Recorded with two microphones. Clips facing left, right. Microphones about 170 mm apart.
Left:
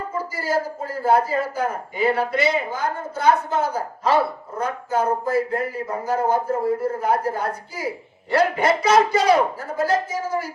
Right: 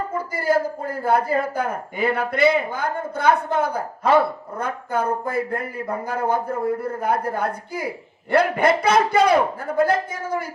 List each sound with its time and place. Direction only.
0.3 s a man's voice: 55° right (ahead or behind)